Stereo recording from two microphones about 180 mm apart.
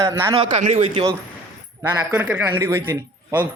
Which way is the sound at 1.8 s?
10° right (ahead or behind).